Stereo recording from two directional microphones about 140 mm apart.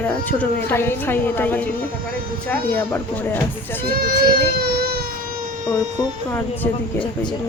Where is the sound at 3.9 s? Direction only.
90° right.